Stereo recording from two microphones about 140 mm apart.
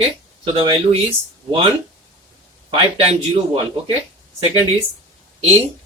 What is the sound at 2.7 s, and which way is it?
A man's voice, 40° right (ahead or behind).